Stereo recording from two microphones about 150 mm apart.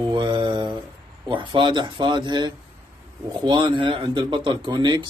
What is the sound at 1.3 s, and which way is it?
Speech, 35° right (ahead or behind).